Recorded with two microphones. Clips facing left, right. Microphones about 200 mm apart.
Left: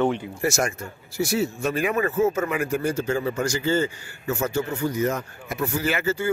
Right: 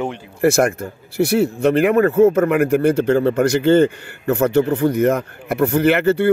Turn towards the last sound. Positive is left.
turn(degrees=-60)  # may be behind; listen again after turning